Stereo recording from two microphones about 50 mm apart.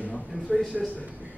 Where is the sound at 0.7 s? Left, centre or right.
Centre.